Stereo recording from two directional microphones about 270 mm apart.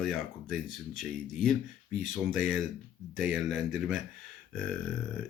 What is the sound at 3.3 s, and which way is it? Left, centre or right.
Speech, centre.